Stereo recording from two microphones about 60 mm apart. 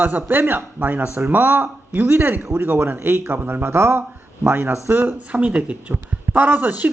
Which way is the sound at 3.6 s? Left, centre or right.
Right.